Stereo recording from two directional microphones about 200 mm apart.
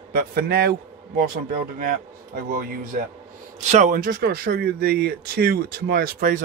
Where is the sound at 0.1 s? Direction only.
50° right (ahead or behind).